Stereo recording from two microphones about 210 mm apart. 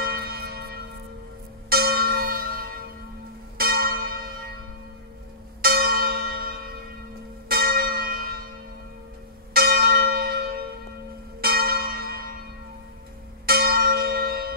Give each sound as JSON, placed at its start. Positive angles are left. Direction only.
{"t": 0.0, "sound": "church bell", "side_deg": -45}
{"t": 5.6, "sound": "church bell", "side_deg": -45}
{"t": 9.5, "sound": "church bell", "side_deg": -45}
{"t": 13.5, "sound": "church bell", "side_deg": -45}